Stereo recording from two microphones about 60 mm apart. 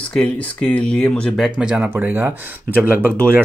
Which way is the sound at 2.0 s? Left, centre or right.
Right.